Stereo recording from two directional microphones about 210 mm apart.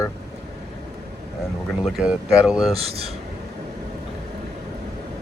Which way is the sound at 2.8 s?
25° right (ahead or behind).